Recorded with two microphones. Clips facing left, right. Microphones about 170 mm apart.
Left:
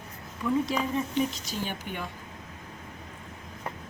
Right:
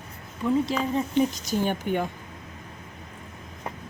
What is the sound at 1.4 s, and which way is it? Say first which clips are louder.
Speech: right 9 dB; 50° right (ahead or behind).